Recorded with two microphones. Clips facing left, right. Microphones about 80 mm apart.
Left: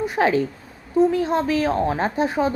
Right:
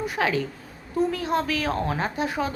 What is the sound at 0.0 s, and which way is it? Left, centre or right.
A woman's voice, left.